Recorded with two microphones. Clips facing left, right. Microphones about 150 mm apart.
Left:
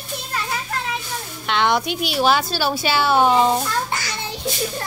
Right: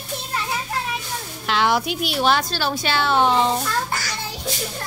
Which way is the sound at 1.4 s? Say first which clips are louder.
Left 1 dB; centre (ahead or behind).